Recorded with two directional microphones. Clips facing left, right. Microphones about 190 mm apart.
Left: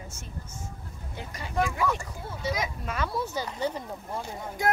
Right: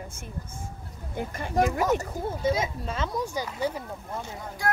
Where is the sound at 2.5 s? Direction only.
30° right (ahead or behind); by 3.8 s 10° right (ahead or behind).